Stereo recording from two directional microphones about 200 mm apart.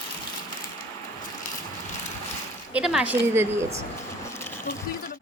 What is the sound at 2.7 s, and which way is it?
A woman's voice, 5° right (ahead or behind).